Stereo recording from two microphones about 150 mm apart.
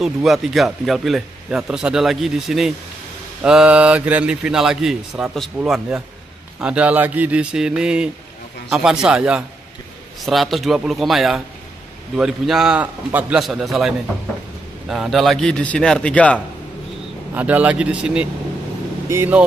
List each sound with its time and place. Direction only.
0.0 s a man's voice: centre (ahead or behind)
17.3 s a man's voice: 10° right (ahead or behind)